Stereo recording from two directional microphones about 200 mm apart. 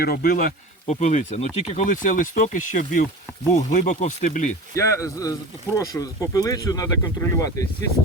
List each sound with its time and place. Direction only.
0.0 s speech: 50° left (ahead or behind)
4.7 s speech: 15° left (ahead or behind)